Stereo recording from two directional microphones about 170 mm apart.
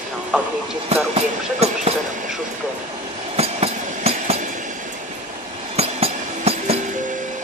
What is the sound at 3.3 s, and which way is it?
Train, 35° right (ahead or behind).